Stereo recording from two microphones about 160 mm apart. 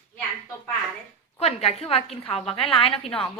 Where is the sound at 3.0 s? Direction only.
5° left (ahead or behind).